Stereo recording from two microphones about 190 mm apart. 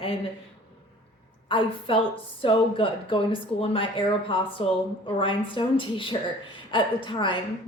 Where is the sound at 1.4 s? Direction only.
25° left (ahead or behind).